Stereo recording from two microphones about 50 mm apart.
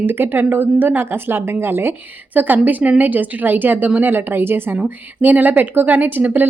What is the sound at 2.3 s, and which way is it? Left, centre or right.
Speech, right.